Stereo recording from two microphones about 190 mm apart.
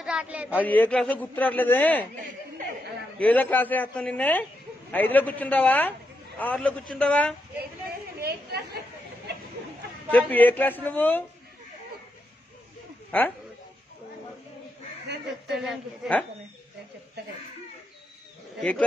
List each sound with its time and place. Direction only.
0.0 s a man's voice: 5° right (ahead or behind)
0.6 s a man's voice: 10° left (ahead or behind)
3.2 s a man's voice: 10° left (ahead or behind)
8.2 s chatter: 55° right (ahead or behind)
10.1 s a man's voice: 10° left (ahead or behind)
13.1 s a man's voice: 10° left (ahead or behind)
15.5 s a woman's voice: centre (ahead or behind)
18.6 s a woman's voice: 5° left (ahead or behind)